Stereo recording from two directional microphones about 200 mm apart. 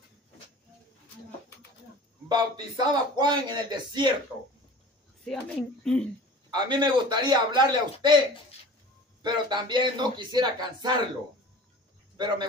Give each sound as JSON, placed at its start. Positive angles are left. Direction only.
{"t": 2.2, "sound": "a man's voice", "side_deg": -20}
{"t": 5.2, "sound": "speech", "side_deg": 0}
{"t": 6.5, "sound": "a man's voice", "side_deg": -20}
{"t": 9.2, "sound": "a man's voice", "side_deg": -20}